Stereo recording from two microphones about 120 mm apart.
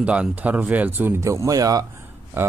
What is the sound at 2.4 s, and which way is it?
Speech, 20° right (ahead or behind).